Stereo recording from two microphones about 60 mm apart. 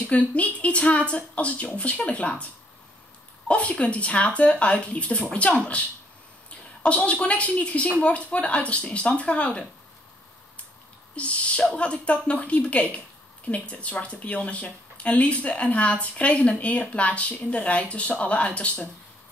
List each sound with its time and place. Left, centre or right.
0.3 s speech: left
11.1 s speech: left